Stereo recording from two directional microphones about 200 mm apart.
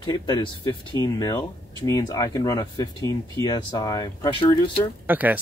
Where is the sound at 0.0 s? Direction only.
20° left (ahead or behind).